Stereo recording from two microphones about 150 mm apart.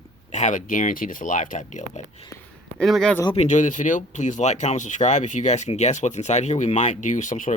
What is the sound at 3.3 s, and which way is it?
Speech, 50° left (ahead or behind).